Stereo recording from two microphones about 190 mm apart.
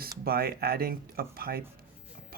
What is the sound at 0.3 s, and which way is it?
Speech, 55° right (ahead or behind).